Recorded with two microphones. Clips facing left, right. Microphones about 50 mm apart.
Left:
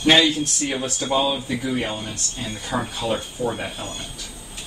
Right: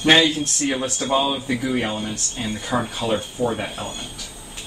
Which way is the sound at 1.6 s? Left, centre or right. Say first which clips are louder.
Right 2 dB; centre.